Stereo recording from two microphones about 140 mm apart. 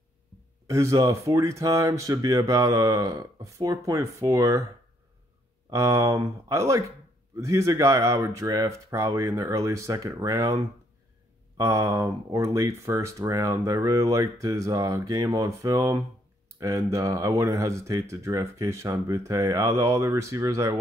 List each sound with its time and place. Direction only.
0.7 s speech: 20° right (ahead or behind)
5.7 s speech: 20° right (ahead or behind)